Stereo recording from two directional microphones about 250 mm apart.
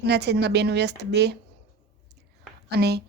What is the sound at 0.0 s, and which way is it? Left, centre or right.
Speech, right.